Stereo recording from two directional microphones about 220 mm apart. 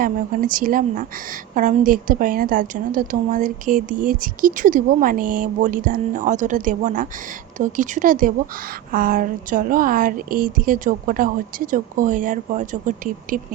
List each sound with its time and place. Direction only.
0.0 s a woman's voice: 40° right (ahead or behind)